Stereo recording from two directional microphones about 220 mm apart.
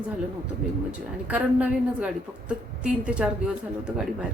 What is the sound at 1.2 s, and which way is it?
A woman's voice, 5° right (ahead or behind).